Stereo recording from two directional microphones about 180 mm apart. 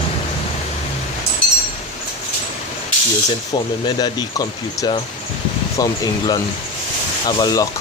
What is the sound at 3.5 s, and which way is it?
Speech, 20° left (ahead or behind).